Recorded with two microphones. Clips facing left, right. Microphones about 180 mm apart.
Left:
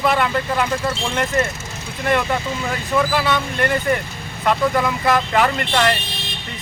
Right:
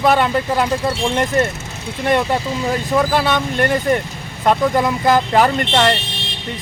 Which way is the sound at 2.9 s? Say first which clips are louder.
Right 2 dB; 35° right (ahead or behind).